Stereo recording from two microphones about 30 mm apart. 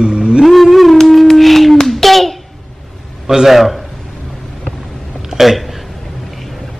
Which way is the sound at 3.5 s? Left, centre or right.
Centre.